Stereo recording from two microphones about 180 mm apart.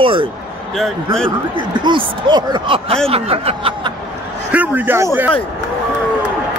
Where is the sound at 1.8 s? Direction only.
25° right (ahead or behind).